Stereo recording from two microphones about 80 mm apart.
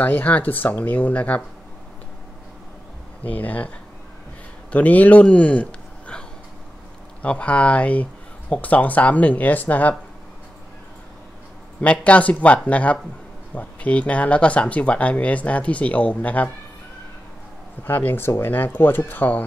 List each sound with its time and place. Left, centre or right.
0.0 s speech: left
3.3 s speech: centre
11.8 s speech: centre
17.8 s speech: left